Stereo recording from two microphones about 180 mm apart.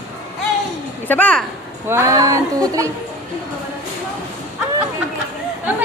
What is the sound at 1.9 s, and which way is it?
Speech, 15° right (ahead or behind).